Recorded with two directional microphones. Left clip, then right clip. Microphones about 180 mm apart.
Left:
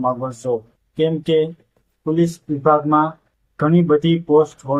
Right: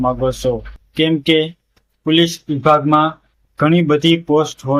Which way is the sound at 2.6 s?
15° right (ahead or behind).